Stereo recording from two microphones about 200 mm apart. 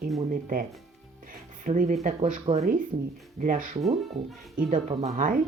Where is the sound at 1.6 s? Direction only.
40° right (ahead or behind).